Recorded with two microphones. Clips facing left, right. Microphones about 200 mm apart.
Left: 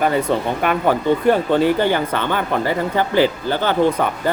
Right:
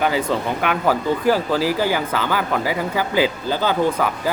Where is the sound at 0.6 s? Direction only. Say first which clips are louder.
Left 2 dB; 5° right (ahead or behind).